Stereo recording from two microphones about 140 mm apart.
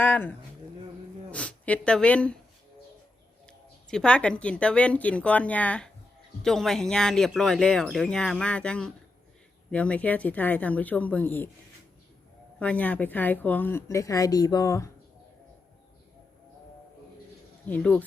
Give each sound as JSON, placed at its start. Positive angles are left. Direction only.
{"t": 0.0, "sound": "a woman's voice", "side_deg": 10}
{"t": 3.4, "sound": "speech", "side_deg": 5}
{"t": 12.5, "sound": "speech", "side_deg": 10}
{"t": 17.7, "sound": "speech", "side_deg": 10}